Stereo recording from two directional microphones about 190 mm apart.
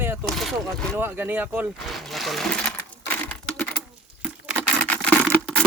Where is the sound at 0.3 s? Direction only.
Centre (ahead or behind).